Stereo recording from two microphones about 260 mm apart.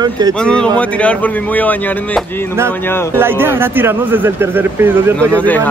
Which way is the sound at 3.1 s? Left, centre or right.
Centre.